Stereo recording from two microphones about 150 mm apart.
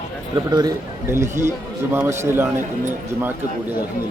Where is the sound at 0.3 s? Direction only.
25° right (ahead or behind).